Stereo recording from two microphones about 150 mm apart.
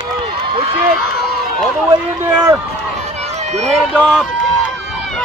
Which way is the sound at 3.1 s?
50° right (ahead or behind).